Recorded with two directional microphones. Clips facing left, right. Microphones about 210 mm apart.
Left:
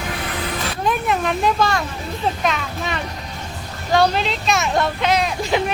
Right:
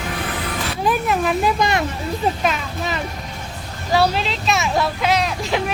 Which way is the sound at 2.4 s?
Centre (ahead or behind).